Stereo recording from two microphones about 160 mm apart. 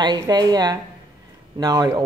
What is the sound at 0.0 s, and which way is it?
Speech, 25° right (ahead or behind).